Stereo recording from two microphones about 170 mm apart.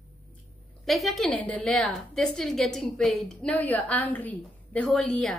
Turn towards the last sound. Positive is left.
turn(degrees=5)  # may be behind; listen again after turning